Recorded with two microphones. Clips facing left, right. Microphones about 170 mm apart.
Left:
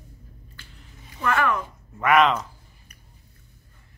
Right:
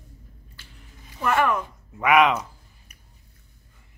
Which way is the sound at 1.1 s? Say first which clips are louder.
Right 1 dB; 10° right (ahead or behind).